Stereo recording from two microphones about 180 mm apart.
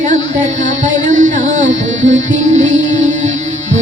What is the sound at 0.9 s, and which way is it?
Music, 45° right (ahead or behind).